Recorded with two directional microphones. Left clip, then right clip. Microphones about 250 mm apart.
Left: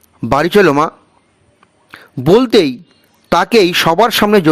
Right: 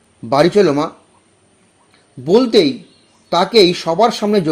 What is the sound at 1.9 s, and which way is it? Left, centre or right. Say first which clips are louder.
Speech: left 3 dB; left.